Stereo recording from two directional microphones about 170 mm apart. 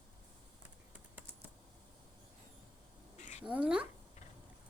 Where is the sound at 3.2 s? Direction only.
45° left (ahead or behind).